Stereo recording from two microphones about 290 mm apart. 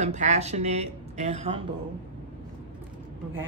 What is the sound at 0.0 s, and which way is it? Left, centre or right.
Speech, right.